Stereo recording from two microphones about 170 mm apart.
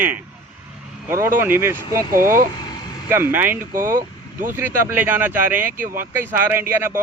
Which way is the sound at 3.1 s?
15° right (ahead or behind).